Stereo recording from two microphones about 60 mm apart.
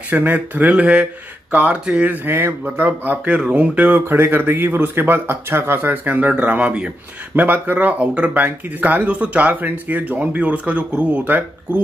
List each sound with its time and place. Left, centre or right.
0.1 s speech: right
2.0 s speech: right; by 6.9 s centre
7.3 s speech: right